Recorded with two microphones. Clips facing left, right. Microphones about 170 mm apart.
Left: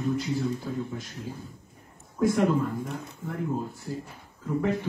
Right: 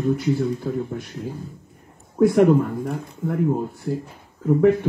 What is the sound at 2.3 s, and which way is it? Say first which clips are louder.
Speech: right 7 dB; 60° right (ahead or behind).